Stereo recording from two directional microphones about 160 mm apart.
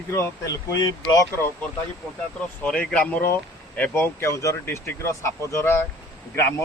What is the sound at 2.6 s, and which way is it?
Speech, 5° left (ahead or behind).